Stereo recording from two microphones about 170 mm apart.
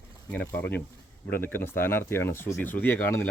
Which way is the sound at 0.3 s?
10° left (ahead or behind).